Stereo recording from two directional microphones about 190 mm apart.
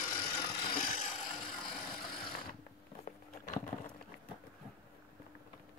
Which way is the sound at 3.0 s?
40° left (ahead or behind).